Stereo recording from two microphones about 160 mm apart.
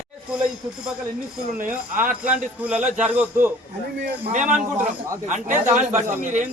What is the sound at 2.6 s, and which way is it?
Speech, 10° right (ahead or behind).